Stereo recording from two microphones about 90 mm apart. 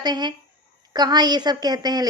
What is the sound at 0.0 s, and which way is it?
A woman's voice, 50° right (ahead or behind).